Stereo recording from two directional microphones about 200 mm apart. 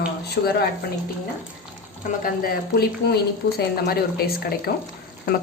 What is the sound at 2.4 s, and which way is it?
A woman's voice, 50° left (ahead or behind).